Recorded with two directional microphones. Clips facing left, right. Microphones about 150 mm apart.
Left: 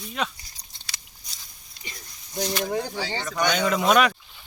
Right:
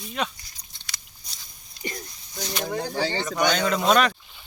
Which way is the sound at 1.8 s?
50° right (ahead or behind).